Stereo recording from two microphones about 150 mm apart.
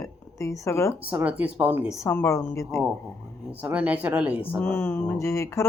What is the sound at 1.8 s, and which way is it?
Speech, 20° left (ahead or behind).